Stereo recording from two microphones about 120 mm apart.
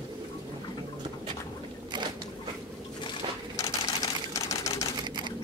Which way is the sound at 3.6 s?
30° left (ahead or behind).